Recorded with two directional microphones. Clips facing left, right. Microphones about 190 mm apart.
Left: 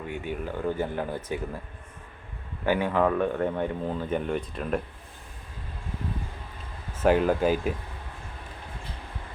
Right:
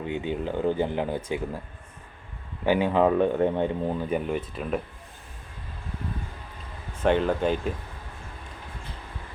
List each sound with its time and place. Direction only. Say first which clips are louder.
0.1 s speech: right 4 dB; 20° right (ahead or behind)
2.6 s speech: right 3 dB; 20° right (ahead or behind); by 4.8 s centre (ahead or behind)
7.0 s speech: left 1 dB; 5° left (ahead or behind)